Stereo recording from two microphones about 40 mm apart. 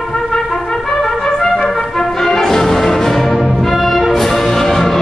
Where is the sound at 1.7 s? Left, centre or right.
Centre.